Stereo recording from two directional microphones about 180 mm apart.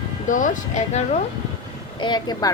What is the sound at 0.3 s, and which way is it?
Speech, 45° left (ahead or behind).